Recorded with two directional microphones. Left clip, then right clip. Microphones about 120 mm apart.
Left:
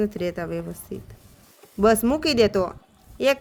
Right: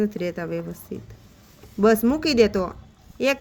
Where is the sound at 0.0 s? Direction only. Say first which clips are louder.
Even; 35° left (ahead or behind).